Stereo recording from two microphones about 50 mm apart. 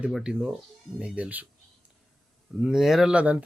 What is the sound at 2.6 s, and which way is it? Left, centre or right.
Speech, centre.